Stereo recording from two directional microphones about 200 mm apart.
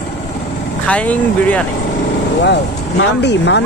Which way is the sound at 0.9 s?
5° left (ahead or behind).